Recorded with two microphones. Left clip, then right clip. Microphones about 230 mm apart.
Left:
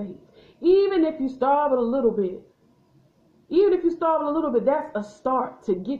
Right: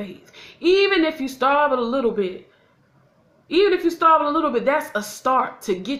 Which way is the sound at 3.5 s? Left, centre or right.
Right.